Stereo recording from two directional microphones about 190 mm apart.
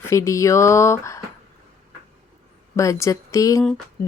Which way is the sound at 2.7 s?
15° left (ahead or behind).